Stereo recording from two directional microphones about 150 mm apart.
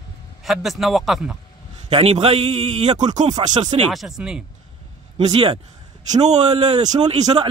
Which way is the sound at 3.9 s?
Centre (ahead or behind).